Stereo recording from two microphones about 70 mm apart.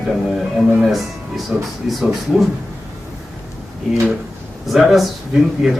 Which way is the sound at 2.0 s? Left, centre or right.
Centre.